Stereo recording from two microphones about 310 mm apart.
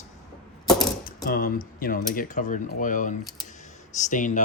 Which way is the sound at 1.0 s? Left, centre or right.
Left.